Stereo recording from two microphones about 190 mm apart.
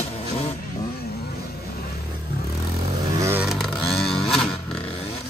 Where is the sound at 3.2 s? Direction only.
10° right (ahead or behind).